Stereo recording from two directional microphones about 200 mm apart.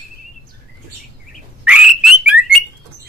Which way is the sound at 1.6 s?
5° right (ahead or behind).